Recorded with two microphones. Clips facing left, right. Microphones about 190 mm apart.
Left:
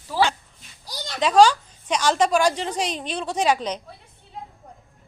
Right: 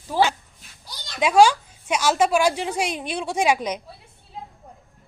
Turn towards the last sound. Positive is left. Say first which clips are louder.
# right 1 dB
turn(degrees=-10)  # may be behind; listen again after turning